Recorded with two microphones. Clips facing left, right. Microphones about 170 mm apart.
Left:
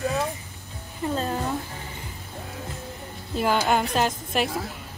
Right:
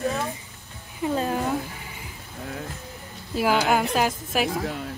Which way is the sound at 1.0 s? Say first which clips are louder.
Right 2 dB; 15° right (ahead or behind).